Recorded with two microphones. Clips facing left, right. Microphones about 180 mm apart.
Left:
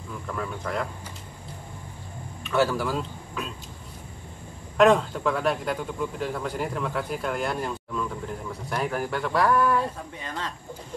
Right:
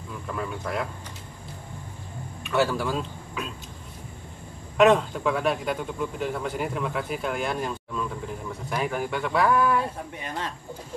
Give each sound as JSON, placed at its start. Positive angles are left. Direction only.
{"t": 0.3, "sound": "speech", "side_deg": -5}
{"t": 2.4, "sound": "a sound", "side_deg": 0}
{"t": 2.7, "sound": "speech", "side_deg": 0}
{"t": 4.7, "sound": "a man's voice", "side_deg": -5}
{"t": 10.2, "sound": "speech", "side_deg": -15}